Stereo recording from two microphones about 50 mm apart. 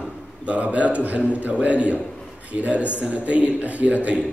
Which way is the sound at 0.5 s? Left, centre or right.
Right.